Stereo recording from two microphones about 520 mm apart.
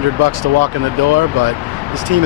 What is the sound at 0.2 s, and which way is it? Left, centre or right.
Speech, right.